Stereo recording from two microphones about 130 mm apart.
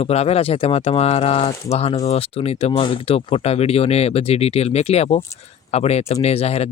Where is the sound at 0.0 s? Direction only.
50° left (ahead or behind).